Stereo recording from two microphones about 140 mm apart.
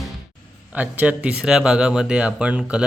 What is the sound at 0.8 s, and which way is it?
Speech, 10° right (ahead or behind).